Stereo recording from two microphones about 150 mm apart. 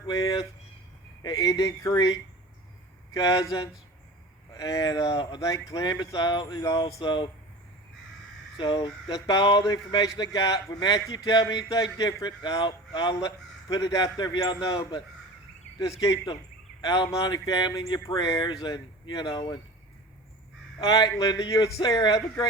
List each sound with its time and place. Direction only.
0.1 s speech: 25° left (ahead or behind)
8.5 s speech: 30° left (ahead or behind)
20.8 s speech: 25° left (ahead or behind)